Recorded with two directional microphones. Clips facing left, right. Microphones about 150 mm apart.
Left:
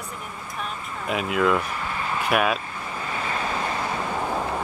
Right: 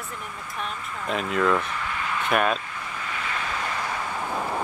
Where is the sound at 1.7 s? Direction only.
35° left (ahead or behind).